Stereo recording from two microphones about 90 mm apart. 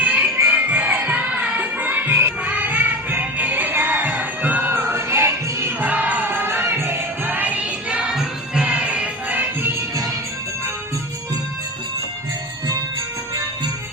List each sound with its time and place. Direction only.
0.0 s music: 15° right (ahead or behind)